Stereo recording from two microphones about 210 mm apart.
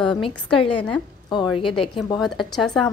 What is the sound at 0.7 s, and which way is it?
Speech, 5° left (ahead or behind).